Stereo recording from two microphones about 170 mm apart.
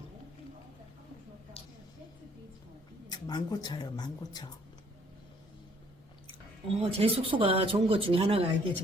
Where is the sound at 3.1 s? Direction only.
25° left (ahead or behind).